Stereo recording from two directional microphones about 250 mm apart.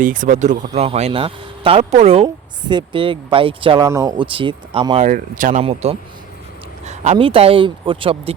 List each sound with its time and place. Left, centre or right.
0.0 s speech: right
5.0 s speech: right